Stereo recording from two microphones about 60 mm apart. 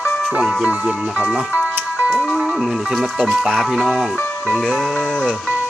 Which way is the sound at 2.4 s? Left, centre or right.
Centre.